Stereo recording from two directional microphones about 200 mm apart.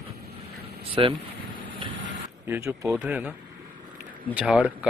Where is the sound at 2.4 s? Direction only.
15° right (ahead or behind).